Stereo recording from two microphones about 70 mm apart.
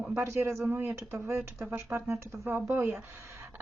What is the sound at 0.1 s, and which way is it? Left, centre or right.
A woman's voice, right.